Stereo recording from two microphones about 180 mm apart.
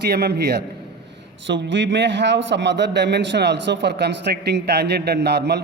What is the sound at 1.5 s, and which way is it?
A man's voice, 85° right.